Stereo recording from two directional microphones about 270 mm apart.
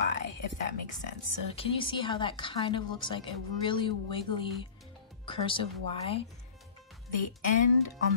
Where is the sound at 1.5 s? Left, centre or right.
Centre.